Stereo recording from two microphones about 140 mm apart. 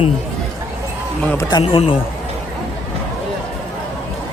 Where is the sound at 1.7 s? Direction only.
40° left (ahead or behind).